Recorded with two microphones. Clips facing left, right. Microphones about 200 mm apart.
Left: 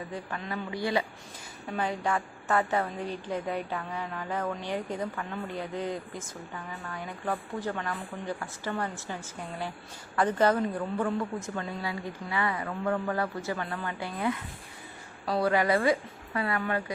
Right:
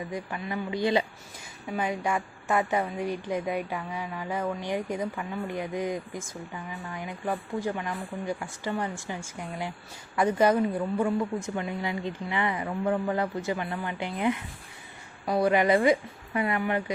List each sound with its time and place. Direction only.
0.1 s a woman's voice: 10° right (ahead or behind)